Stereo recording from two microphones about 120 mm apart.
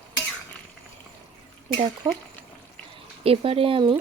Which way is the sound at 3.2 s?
55° right (ahead or behind).